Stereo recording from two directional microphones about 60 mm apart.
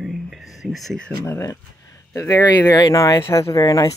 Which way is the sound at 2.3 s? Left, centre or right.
Left.